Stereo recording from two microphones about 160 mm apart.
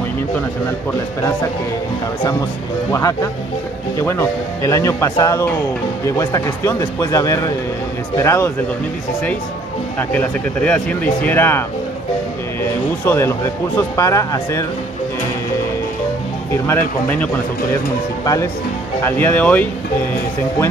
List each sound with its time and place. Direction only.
2.9 s speech: 20° left (ahead or behind)
9.9 s speech: 10° left (ahead or behind)
13.0 s speech: 15° left (ahead or behind)
16.6 s speech: 10° left (ahead or behind)